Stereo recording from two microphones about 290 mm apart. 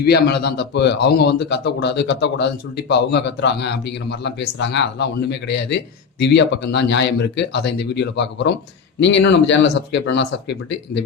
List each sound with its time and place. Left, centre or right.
0.0 s a man's voice: left